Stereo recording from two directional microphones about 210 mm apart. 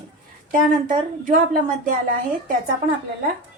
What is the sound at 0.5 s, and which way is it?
A woman's voice, 40° right (ahead or behind).